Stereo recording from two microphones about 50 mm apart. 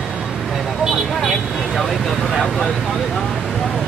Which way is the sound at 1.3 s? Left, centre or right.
Centre.